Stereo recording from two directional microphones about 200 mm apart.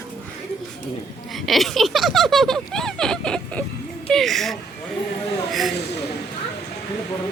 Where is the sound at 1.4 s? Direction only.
Centre (ahead or behind).